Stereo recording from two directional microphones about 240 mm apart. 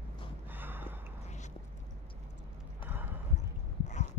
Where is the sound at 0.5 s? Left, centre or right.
Centre.